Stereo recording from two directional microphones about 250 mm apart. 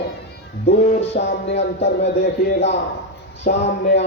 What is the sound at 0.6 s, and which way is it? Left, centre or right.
Music, left.